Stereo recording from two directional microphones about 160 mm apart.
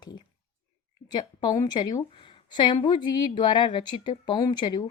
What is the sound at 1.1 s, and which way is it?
A woman's voice, 25° left (ahead or behind).